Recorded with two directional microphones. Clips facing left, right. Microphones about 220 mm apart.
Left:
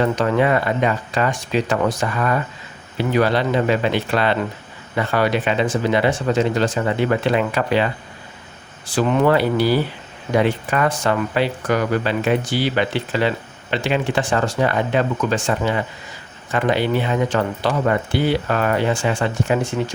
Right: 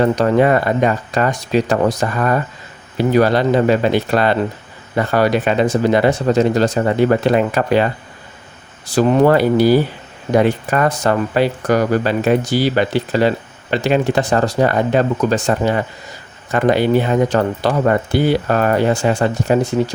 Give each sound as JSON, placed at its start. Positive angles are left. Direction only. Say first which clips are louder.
{"t": 0.0, "sound": "speech", "louder": "right 4 dB", "side_deg": -40}
{"t": 8.9, "sound": "speech", "louder": "right 4 dB", "side_deg": -40}